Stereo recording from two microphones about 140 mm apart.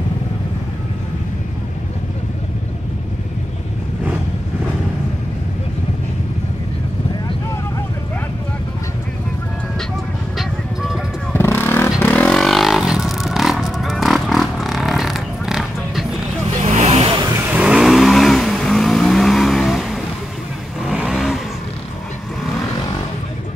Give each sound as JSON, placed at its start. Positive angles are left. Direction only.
{"t": 10.3, "sound": "music", "side_deg": 0}
{"t": 11.3, "sound": "vehicle", "side_deg": 15}
{"t": 16.7, "sound": "vehicle", "side_deg": -50}
{"t": 17.5, "sound": "vehicle", "side_deg": -5}